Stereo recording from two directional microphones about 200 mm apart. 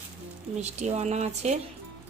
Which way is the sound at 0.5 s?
35° right (ahead or behind).